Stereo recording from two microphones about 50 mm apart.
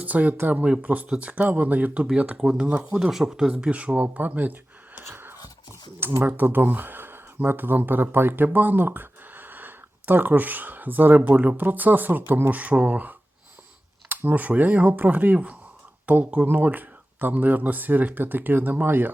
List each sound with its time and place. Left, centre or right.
0.0 s speech: right
2.4 s speech: centre
3.5 s speech: right
5.0 s a sound: right
6.0 s speech: right